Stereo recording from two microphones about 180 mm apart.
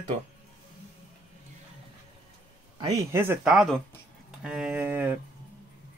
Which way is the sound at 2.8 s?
15° right (ahead or behind).